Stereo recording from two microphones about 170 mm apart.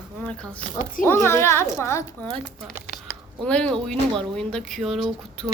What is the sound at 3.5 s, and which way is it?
Speech, 5° left (ahead or behind).